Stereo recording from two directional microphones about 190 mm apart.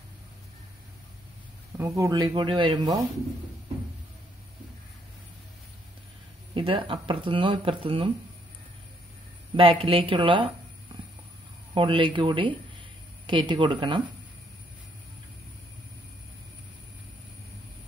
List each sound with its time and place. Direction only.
1.8 s speech: 15° right (ahead or behind)
6.5 s speech: 30° right (ahead or behind)
9.6 s speech: 30° right (ahead or behind)
11.7 s speech: 25° right (ahead or behind)